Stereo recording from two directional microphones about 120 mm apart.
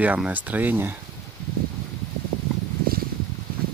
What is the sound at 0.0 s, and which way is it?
Speech, 15° right (ahead or behind).